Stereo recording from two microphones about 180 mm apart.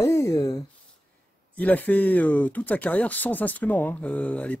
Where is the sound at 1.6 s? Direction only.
10° left (ahead or behind).